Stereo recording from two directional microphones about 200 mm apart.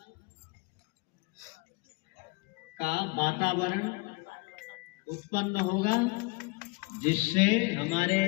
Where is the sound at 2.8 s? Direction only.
50° left (ahead or behind).